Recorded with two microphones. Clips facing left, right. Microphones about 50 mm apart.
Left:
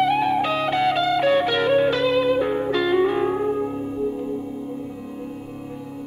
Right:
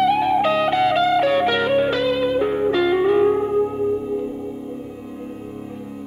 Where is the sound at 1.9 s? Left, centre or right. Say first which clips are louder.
Even; right.